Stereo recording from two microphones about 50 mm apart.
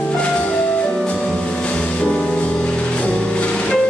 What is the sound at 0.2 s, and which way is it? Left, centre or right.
Music, left.